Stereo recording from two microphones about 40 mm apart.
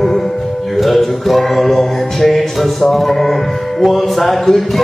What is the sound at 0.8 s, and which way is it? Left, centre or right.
Music, centre.